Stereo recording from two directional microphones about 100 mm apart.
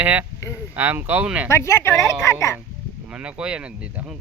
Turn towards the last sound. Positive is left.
turn(degrees=-10)  # may be behind; listen again after turning